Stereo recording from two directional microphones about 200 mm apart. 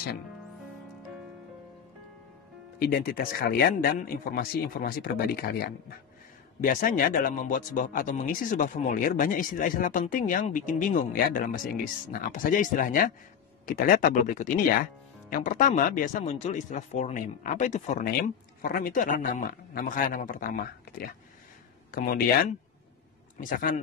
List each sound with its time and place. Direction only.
2.9 s speech: 45° left (ahead or behind)